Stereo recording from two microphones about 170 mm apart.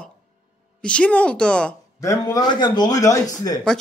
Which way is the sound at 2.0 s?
20° left (ahead or behind).